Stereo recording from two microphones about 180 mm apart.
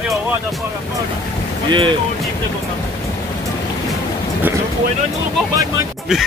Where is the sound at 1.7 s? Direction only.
25° right (ahead or behind).